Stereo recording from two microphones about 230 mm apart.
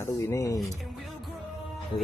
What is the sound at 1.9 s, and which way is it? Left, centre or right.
Music, centre.